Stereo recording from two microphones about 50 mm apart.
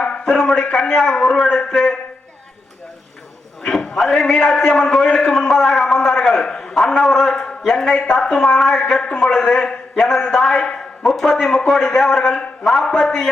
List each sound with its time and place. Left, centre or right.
0.0 s a man's voice: centre
3.6 s a man's voice: centre
6.4 s a sound: centre
6.7 s a man's voice: centre
11.0 s a man's voice: centre